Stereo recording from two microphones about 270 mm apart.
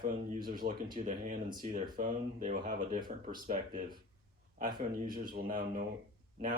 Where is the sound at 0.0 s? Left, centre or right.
Right.